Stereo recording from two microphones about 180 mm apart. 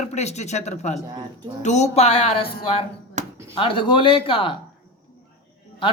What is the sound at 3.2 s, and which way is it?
Chop, 45° right (ahead or behind).